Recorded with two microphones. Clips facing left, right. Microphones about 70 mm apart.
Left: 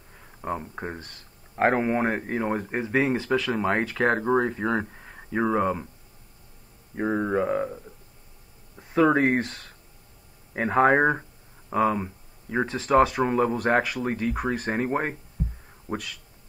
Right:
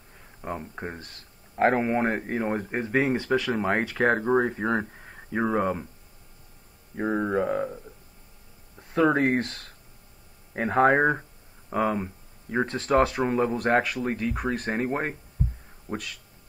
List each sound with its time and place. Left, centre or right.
0.4 s speech: centre
4.9 s speech: centre
7.3 s speech: left
9.0 s speech: left
9.4 s speech: centre
10.6 s speech: centre
10.9 s speech: centre